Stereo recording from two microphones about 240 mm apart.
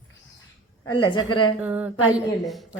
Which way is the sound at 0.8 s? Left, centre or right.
Centre.